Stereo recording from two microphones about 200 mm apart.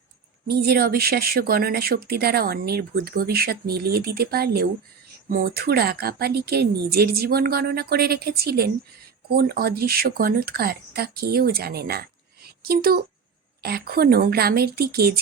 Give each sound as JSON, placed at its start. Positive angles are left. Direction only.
{"t": 0.4, "sound": "speech", "side_deg": -50}